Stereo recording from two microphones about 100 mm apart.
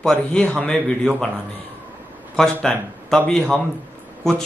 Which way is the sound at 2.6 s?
5° left (ahead or behind).